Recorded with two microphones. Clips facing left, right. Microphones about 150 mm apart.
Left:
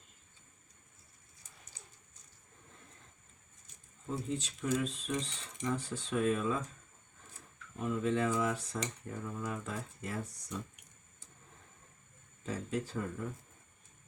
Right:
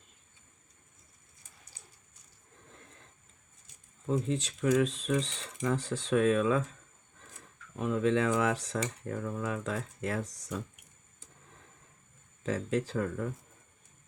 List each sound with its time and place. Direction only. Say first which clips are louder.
4.3 s speech: right 4 dB; 90° right
7.8 s speech: right 4 dB; 90° right
12.4 s speech: right 6 dB; 90° right